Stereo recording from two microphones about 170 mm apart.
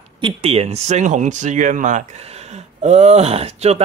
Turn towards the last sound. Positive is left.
turn(degrees=-35)  # may be behind; listen again after turning